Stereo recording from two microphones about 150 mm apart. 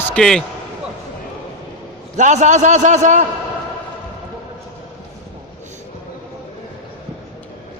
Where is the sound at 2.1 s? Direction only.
55° right (ahead or behind).